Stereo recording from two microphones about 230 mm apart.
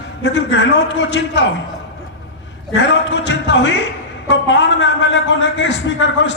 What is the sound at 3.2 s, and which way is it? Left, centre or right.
A man's voice, left.